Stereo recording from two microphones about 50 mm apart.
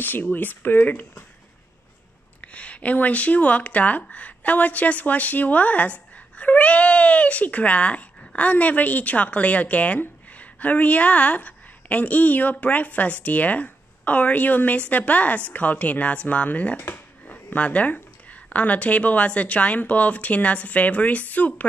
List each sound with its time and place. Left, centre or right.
0.0 s speech: left
2.4 s speech: left